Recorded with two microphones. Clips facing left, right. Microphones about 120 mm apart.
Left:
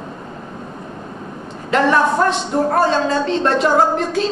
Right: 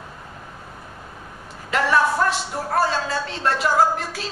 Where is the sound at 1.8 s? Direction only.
25° left (ahead or behind).